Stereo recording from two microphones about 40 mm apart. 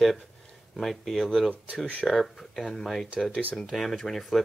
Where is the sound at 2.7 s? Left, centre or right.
Centre.